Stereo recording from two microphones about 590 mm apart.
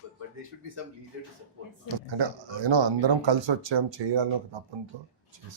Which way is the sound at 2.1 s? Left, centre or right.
Right.